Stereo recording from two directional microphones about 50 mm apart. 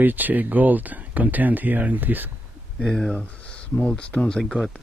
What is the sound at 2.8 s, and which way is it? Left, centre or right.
Speech, centre.